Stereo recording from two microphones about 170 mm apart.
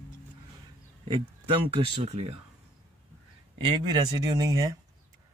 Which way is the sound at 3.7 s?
25° right (ahead or behind).